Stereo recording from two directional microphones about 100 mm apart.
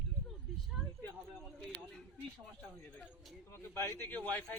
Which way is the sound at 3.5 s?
25° left (ahead or behind).